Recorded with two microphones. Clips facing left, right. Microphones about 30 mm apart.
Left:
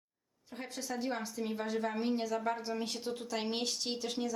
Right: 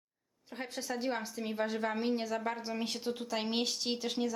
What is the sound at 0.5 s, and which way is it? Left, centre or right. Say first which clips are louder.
A woman's voice: right 2 dB; centre.